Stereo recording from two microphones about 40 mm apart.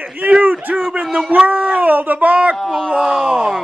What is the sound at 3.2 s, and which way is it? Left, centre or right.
Groan, right.